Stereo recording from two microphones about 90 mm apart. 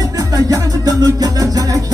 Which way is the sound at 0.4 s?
40° right (ahead or behind).